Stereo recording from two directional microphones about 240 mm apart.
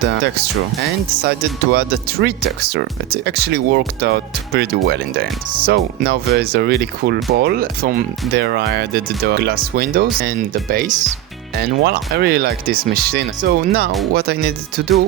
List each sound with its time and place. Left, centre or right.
1.2 s speech: right
14.8 s music: right